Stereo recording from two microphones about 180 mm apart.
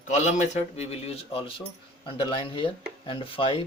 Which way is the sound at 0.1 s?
40° left (ahead or behind).